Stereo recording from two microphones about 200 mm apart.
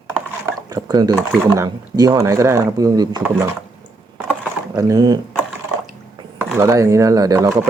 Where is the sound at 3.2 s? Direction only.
10° right (ahead or behind).